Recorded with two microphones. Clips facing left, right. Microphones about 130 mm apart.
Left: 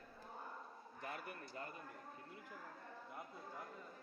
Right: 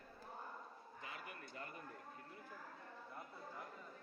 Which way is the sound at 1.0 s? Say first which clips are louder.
Left 4 dB; 50° left (ahead or behind).